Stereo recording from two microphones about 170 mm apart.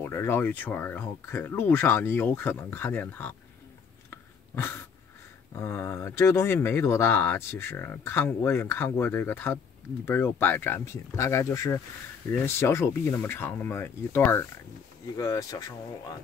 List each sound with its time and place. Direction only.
0.0 s speech: 15° left (ahead or behind)
4.1 s a sound: 15° left (ahead or behind)
5.5 s speech: 15° left (ahead or behind)